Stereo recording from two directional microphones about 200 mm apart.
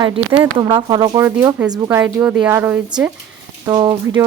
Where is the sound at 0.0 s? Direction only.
20° right (ahead or behind).